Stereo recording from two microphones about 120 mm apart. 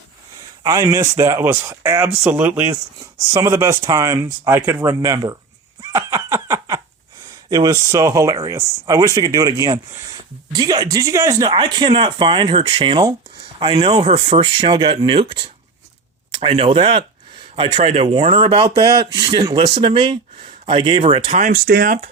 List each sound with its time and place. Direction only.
0.6 s speech: 25° right (ahead or behind)
5.8 s laughter: 25° right (ahead or behind)
7.5 s speech: 30° right (ahead or behind)
13.9 s speech: 60° right (ahead or behind)
17.5 s speech: 60° right (ahead or behind); by 21.5 s 75° right (ahead or behind)